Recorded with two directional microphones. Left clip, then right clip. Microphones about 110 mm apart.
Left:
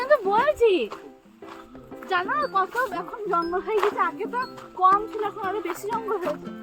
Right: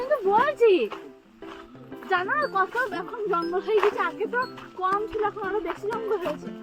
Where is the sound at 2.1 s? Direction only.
30° left (ahead or behind).